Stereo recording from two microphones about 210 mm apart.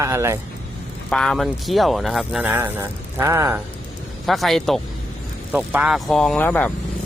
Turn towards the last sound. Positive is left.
turn(degrees=10)  # may be behind; listen again after turning